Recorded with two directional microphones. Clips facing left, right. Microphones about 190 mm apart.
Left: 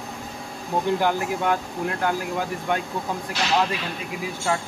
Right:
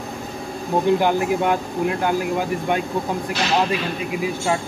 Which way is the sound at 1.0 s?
20° right (ahead or behind).